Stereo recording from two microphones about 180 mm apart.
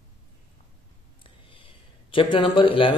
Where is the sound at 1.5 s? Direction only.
30° left (ahead or behind).